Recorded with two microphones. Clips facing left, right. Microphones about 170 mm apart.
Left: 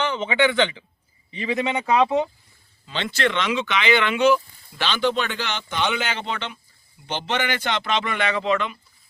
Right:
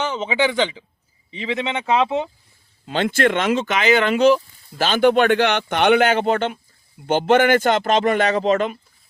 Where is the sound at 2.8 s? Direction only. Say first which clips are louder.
Right 6 dB; 50° right (ahead or behind).